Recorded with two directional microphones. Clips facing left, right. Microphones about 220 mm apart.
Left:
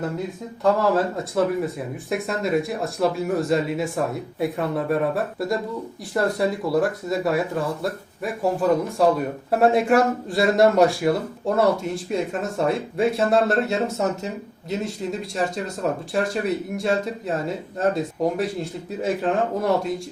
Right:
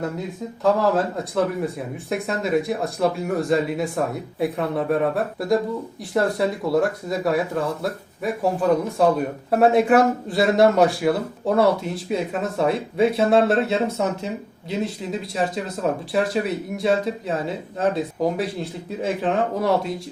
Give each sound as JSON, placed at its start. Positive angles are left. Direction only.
{"t": 0.6, "sound": "speech", "side_deg": 0}